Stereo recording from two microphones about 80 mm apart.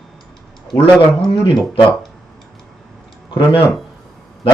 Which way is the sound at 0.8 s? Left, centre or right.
Left.